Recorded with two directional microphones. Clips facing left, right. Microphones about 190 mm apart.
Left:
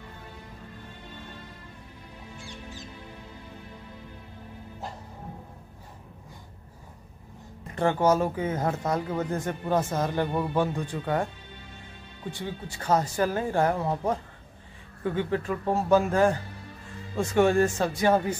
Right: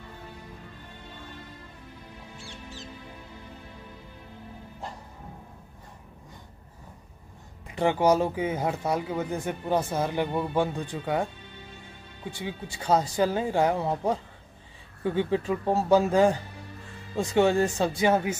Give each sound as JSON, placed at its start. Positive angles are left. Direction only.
{"t": 7.7, "sound": "speech", "side_deg": -15}
{"t": 12.3, "sound": "speech", "side_deg": -10}
{"t": 15.1, "sound": "speech", "side_deg": -20}